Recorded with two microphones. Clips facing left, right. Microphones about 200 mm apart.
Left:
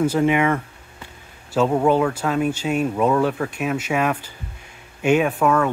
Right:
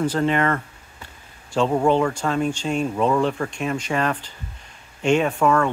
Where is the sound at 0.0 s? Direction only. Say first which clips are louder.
Left 3 dB; 10° left (ahead or behind).